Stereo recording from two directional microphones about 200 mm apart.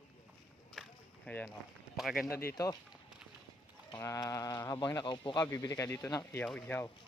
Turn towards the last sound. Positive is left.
turn(degrees=5)  # may be behind; listen again after turning